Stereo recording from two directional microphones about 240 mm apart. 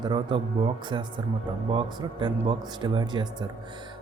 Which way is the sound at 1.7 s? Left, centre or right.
Right.